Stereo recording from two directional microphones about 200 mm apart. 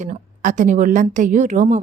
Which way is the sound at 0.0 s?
40° right (ahead or behind).